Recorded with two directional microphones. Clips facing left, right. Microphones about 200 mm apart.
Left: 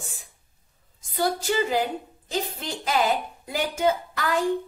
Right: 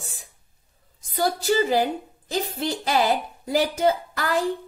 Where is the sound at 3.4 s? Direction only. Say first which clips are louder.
Right 3 dB; 35° right (ahead or behind).